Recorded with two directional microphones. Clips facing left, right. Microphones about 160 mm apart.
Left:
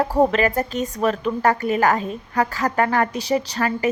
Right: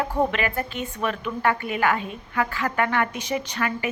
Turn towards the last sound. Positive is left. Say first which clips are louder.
# left 5 dB
turn(degrees=35)  # may be behind; listen again after turning